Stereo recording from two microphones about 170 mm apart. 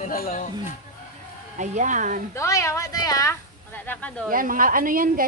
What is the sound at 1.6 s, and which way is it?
Speech, 45° right (ahead or behind).